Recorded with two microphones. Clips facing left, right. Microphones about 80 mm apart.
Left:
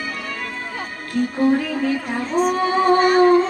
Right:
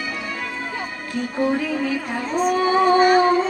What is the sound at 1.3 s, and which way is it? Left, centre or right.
Music, centre.